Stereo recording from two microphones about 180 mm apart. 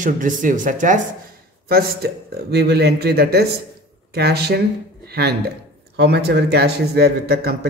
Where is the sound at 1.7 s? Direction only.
60° right (ahead or behind).